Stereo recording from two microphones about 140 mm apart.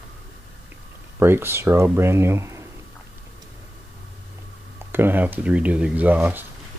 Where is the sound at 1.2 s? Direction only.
15° right (ahead or behind).